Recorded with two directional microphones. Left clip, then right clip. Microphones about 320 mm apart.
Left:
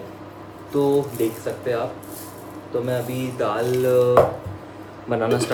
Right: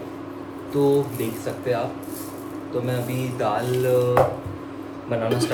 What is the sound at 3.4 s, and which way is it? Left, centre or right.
Speech, centre.